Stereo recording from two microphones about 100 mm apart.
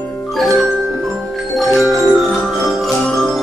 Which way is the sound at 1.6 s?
Centre (ahead or behind).